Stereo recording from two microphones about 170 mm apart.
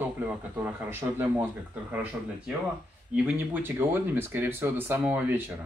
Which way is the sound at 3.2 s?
10° right (ahead or behind).